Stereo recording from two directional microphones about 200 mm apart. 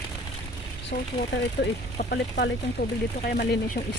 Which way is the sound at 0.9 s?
50° left (ahead or behind).